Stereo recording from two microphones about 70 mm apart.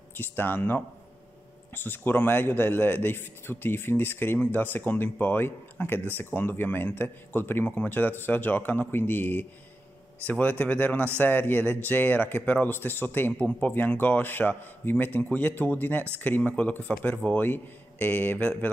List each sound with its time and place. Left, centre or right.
0.2 s speech: left